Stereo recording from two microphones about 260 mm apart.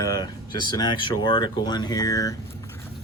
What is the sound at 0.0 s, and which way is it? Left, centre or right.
Speech, centre.